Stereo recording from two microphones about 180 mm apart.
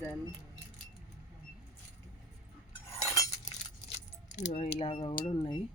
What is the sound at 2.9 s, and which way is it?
Cutlery, 20° left (ahead or behind).